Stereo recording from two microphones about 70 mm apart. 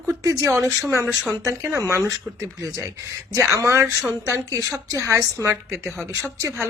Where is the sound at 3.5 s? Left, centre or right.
Right.